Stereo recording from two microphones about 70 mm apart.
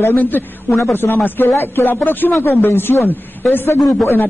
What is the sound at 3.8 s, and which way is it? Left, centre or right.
Speech, centre.